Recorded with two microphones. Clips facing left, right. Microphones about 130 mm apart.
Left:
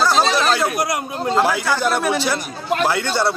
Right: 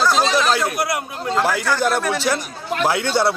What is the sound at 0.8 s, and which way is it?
Speech, 20° left (ahead or behind).